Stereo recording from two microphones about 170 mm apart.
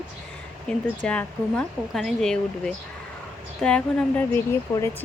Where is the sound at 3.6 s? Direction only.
5° left (ahead or behind).